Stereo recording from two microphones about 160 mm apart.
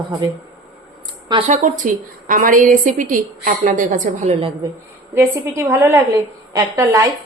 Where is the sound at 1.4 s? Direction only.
55° right (ahead or behind).